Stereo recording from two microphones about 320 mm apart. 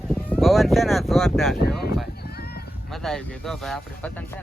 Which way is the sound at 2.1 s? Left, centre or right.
Left.